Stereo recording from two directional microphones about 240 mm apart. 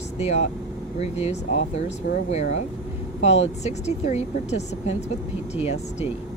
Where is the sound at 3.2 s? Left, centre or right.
Left.